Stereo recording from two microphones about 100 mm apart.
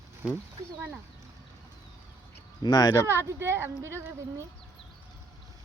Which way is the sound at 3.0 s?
25° right (ahead or behind).